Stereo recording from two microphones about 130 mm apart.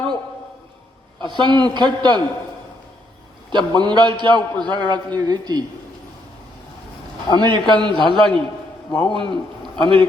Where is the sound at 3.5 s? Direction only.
35° right (ahead or behind).